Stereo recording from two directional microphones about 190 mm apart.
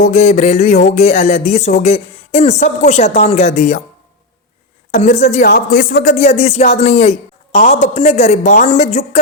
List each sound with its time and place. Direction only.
0.0 s speech: 35° left (ahead or behind)
4.9 s speech: 40° left (ahead or behind)